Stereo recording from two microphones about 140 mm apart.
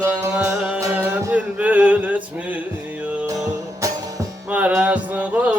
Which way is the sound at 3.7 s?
25° right (ahead or behind).